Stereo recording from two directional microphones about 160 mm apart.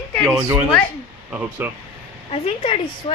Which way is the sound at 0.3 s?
15° right (ahead or behind).